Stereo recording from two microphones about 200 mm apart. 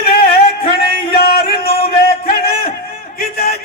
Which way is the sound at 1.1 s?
50° left (ahead or behind).